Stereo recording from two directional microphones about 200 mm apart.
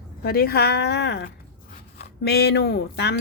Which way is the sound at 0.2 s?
50° left (ahead or behind).